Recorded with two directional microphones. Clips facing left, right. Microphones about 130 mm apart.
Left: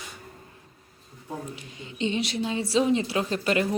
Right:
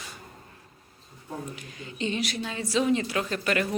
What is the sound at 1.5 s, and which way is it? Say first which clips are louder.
Speech: left 1 dB; 25° left (ahead or behind).